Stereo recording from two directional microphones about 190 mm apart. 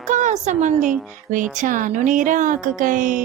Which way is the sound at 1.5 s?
45° right (ahead or behind).